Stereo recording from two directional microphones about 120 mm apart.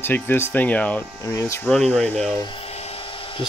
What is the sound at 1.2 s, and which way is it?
Speech, 25° left (ahead or behind).